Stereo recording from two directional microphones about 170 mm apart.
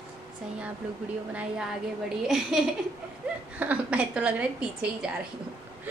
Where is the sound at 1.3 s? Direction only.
5° right (ahead or behind).